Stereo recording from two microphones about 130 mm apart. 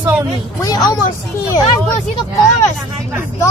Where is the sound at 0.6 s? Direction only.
30° left (ahead or behind).